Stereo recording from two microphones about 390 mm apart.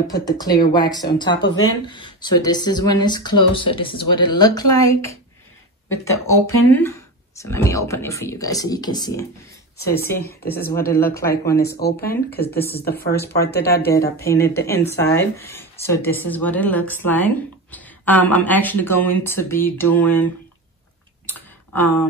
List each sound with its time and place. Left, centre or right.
0.0 s speech: centre
6.3 s speech: centre
10.5 s speech: centre
11.6 s speech: left
14.1 s speech: centre
21.3 s a sound: centre